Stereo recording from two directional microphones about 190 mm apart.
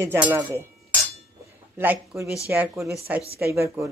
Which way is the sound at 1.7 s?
10° right (ahead or behind).